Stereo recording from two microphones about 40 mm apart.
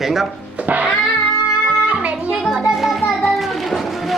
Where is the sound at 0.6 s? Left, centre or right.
Right.